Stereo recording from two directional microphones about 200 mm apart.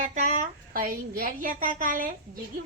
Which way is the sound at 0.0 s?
35° right (ahead or behind).